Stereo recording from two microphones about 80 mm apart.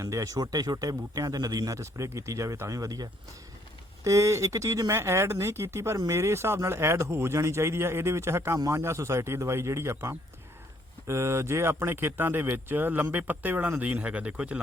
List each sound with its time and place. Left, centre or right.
0.0 s speech: right; by 14.6 s centre